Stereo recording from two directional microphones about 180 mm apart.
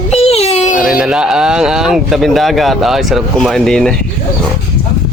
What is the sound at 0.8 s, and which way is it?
Speech, 5° right (ahead or behind).